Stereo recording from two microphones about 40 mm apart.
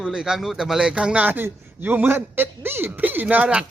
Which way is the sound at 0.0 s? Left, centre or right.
Centre.